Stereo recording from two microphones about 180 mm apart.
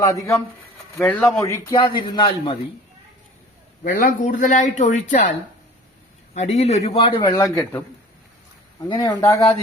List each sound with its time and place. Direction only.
0.9 s a man's voice: 10° left (ahead or behind); by 2.6 s 25° left (ahead or behind)
3.8 s a man's voice: 50° left (ahead or behind)
6.3 s a man's voice: 35° left (ahead or behind); by 7.9 s 15° left (ahead or behind)
8.9 s a man's voice: 25° left (ahead or behind)